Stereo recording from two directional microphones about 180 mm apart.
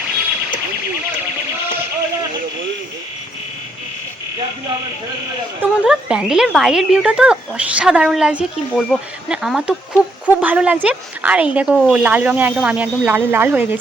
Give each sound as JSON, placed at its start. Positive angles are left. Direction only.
{"t": 5.8, "sound": "speech", "side_deg": -5}